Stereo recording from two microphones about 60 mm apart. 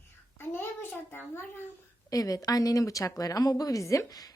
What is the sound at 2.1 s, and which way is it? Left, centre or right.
Speech, left.